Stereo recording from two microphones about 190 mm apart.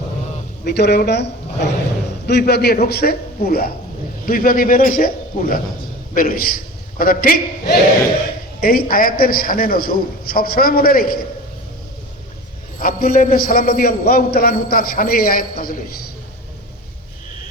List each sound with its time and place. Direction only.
0.6 s a man's voice: 60° left (ahead or behind)
12.8 s a man's voice: 50° left (ahead or behind)